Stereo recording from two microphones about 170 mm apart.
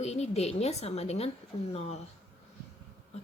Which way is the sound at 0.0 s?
40° left (ahead or behind).